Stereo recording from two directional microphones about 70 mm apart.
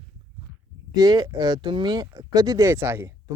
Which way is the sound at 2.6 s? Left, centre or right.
Right.